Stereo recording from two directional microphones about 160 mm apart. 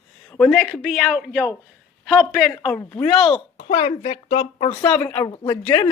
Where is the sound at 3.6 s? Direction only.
45° left (ahead or behind).